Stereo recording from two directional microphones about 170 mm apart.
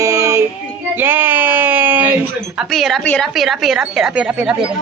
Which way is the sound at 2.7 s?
Centre (ahead or behind).